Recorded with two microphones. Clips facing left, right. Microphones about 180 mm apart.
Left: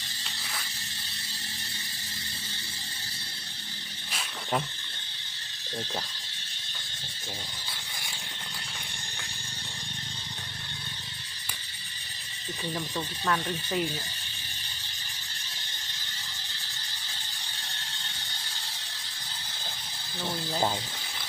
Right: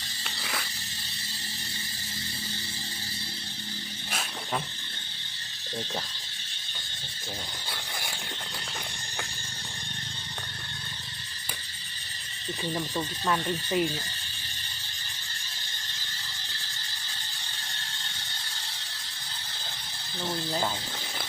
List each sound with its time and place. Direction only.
0.3 s mechanisms: 70° right (ahead or behind)
12.7 s speech: 10° right (ahead or behind)